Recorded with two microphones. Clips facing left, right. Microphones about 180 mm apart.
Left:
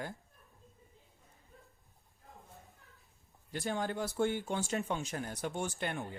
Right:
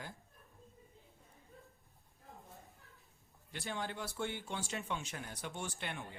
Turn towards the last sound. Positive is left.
turn(degrees=45)  # may be behind; listen again after turning